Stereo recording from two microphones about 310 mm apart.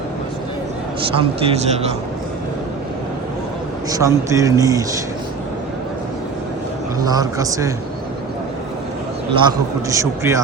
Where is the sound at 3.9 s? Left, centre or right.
Centre.